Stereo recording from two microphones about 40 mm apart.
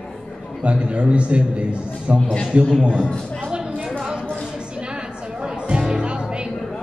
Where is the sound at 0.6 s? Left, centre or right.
Right.